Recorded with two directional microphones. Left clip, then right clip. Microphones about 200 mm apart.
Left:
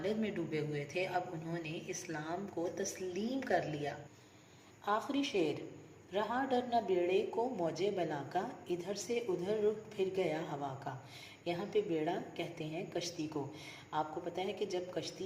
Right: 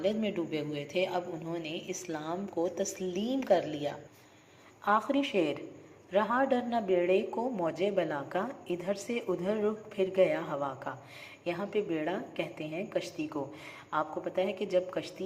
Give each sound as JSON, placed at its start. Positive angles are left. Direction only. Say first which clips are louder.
{"t": 0.0, "sound": "a woman's voice", "louder": "right 6 dB", "side_deg": -20}